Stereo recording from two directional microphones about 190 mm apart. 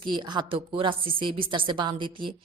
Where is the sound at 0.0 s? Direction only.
25° right (ahead or behind).